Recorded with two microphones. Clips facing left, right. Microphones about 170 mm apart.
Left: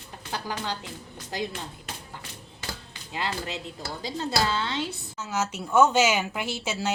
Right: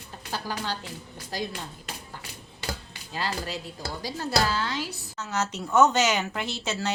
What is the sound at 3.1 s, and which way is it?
A woman's voice, 20° left (ahead or behind).